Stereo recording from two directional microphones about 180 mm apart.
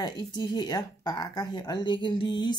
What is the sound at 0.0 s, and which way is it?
Speech, 25° left (ahead or behind).